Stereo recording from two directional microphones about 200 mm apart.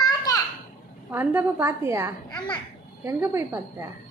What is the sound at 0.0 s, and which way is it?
Children playing, 20° left (ahead or behind).